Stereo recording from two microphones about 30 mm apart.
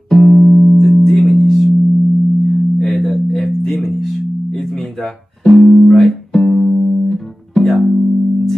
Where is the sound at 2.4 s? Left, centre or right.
Centre.